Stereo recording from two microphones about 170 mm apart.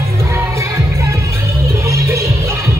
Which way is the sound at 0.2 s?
15° right (ahead or behind).